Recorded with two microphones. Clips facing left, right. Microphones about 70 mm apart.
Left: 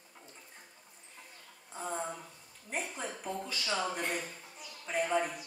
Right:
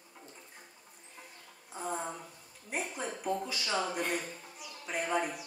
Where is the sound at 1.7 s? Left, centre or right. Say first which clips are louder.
Right 2 dB; centre.